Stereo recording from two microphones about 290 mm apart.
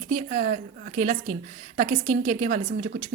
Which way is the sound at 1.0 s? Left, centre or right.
Right.